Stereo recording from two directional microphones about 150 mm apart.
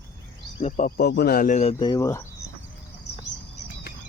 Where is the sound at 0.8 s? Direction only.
90° left; by 1.7 s 55° left (ahead or behind).